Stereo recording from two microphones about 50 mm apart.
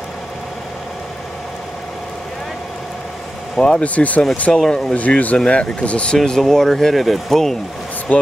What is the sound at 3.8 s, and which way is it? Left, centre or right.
Speech, left.